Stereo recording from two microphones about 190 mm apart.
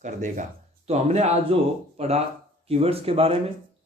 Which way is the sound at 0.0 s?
40° right (ahead or behind).